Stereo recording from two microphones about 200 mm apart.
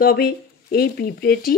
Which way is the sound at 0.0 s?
50° left (ahead or behind).